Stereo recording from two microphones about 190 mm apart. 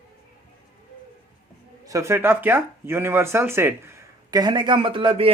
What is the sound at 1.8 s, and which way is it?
Speech, 15° right (ahead or behind).